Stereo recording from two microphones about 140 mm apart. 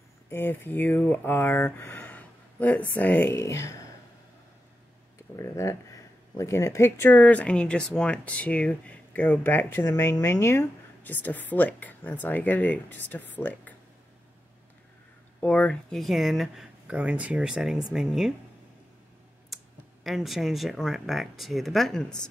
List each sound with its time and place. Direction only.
0.3 s speech: 15° left (ahead or behind)
5.3 s speech: 20° left (ahead or behind)
15.4 s speech: 10° left (ahead or behind)
19.5 s speech: centre (ahead or behind)